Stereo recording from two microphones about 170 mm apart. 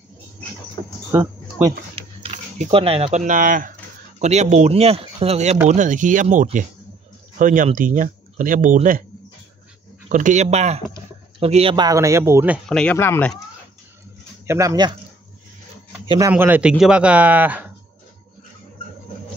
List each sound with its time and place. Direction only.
1.1 s a sound: 15° right (ahead or behind)
2.0 s speech: 40° right (ahead or behind)
4.2 s speech: 40° right (ahead or behind)
10.0 s speech: 45° right (ahead or behind); by 12.5 s 15° right (ahead or behind)
12.6 s speech: 5° left (ahead or behind)
12.9 s speech: 15° left (ahead or behind)
14.4 s speech: 15° right (ahead or behind)
16.3 s speech: 10° right (ahead or behind)